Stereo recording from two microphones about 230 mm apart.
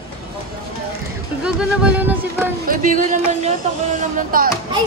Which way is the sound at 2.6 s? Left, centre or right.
Right.